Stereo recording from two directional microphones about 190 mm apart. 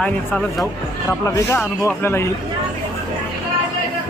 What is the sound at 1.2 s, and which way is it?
Speech, 15° left (ahead or behind).